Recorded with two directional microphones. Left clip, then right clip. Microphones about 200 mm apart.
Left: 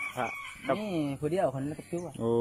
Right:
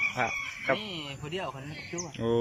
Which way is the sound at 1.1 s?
60° left (ahead or behind).